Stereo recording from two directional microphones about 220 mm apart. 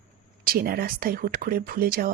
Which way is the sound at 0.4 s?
40° right (ahead or behind).